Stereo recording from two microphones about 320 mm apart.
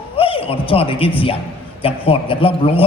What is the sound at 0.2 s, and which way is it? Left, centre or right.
A man's voice, centre.